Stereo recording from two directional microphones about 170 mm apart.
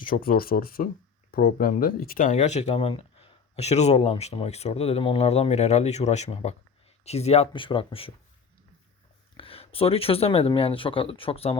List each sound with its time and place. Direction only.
0.0 s speech: 55° left (ahead or behind); by 8.1 s 30° left (ahead or behind)
9.4 s speech: 35° left (ahead or behind)